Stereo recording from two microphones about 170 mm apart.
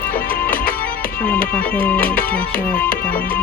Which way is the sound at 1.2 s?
10° left (ahead or behind).